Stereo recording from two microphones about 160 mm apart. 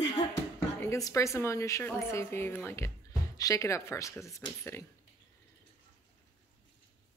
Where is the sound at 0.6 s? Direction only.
20° left (ahead or behind).